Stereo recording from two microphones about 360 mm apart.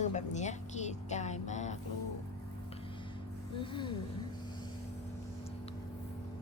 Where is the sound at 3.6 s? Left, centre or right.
Centre.